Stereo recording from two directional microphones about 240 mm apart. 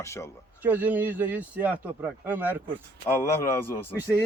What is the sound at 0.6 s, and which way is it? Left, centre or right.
A man's voice, centre.